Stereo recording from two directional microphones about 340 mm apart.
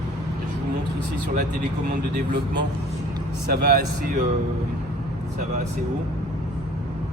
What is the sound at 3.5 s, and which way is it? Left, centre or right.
Speech, right.